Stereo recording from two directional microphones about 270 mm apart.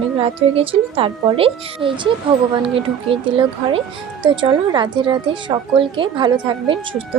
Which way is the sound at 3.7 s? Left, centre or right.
Centre.